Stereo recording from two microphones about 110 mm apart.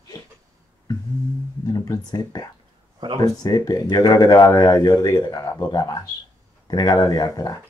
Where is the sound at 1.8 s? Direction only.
30° left (ahead or behind).